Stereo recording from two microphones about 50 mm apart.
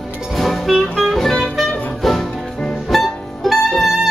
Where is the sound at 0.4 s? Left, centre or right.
Centre.